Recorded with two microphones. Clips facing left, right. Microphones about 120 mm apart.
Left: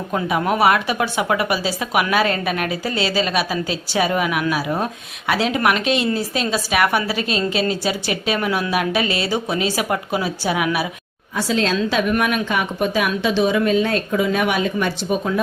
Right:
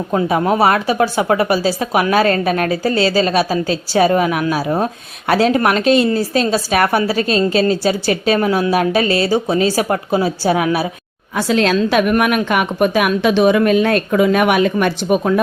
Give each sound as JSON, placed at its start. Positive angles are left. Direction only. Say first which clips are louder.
{"t": 0.1, "sound": "a woman's voice", "louder": "right 4 dB", "side_deg": -30}
{"t": 11.3, "sound": "a woman's voice", "louder": "right 5 dB", "side_deg": -65}